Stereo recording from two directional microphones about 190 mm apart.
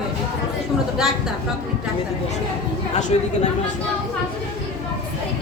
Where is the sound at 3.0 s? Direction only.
40° left (ahead or behind).